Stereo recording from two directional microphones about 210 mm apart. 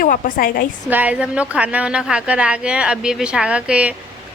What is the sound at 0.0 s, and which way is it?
Speech, 40° left (ahead or behind).